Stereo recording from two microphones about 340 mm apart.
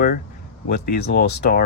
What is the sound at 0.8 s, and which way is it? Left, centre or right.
Speech, left.